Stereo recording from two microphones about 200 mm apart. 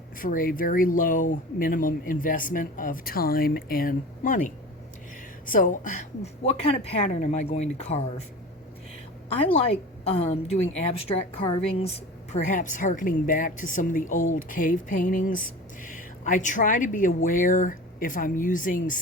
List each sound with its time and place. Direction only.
0.2 s a woman's voice: 45° left (ahead or behind)
9.5 s a woman's voice: 30° left (ahead or behind)